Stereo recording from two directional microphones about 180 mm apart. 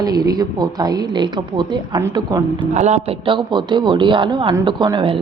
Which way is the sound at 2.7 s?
40° right (ahead or behind).